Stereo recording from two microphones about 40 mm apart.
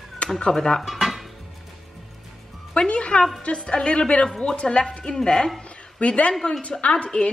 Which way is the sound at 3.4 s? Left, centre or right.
Left.